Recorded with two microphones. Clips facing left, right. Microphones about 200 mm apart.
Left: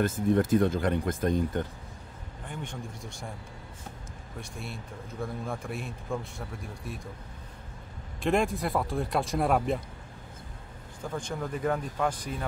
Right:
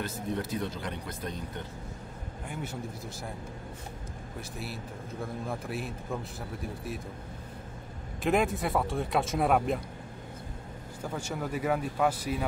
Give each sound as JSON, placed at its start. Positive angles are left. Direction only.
{"t": 0.0, "sound": "speech", "side_deg": 50}
{"t": 2.4, "sound": "speech", "side_deg": -5}
{"t": 4.4, "sound": "speech", "side_deg": -5}
{"t": 8.2, "sound": "speech", "side_deg": 0}
{"t": 11.0, "sound": "speech", "side_deg": -5}